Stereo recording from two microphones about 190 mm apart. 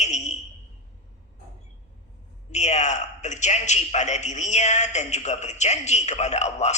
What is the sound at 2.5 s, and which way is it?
A man's voice, 35° left (ahead or behind).